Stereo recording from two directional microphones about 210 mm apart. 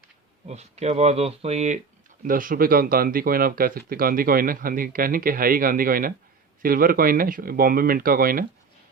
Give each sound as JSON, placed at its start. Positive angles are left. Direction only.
{"t": 0.4, "sound": "speech", "side_deg": -30}